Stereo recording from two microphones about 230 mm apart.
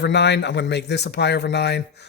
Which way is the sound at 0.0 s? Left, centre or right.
Left.